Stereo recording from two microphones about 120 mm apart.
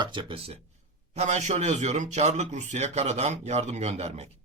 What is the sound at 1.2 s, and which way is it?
Speech, 75° right (ahead or behind).